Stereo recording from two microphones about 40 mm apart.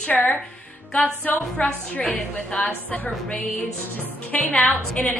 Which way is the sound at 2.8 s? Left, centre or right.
Left.